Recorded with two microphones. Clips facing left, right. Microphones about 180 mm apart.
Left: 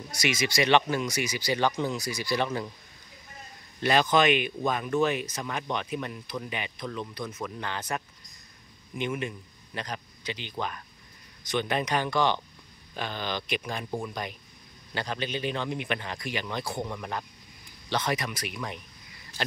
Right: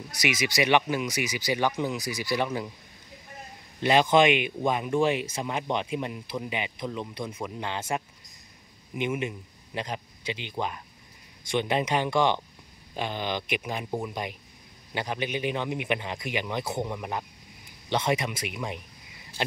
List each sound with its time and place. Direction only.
0.2 s a man's voice: 15° right (ahead or behind)
3.8 s a man's voice: 20° right (ahead or behind)
17.8 s speech: 25° right (ahead or behind)